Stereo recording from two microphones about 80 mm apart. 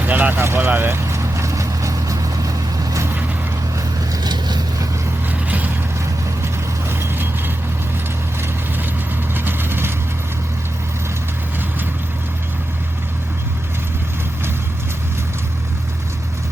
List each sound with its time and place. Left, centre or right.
0.0 s vehicle: right
4.1 s vehicle: right
5.3 s vehicle: right
6.4 s vehicle: right
9.3 s vehicle: right